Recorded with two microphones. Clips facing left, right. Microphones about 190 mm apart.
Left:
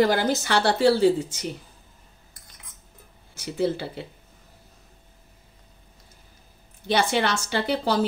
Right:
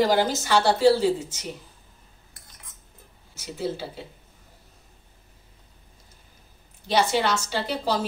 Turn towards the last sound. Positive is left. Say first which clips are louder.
# left 2 dB
turn(degrees=60)  # may be behind; listen again after turning